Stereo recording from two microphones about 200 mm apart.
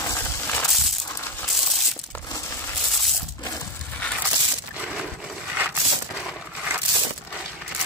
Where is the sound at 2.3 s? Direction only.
15° left (ahead or behind).